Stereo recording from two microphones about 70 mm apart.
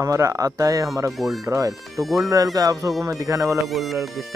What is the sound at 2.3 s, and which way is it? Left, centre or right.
Speech, right.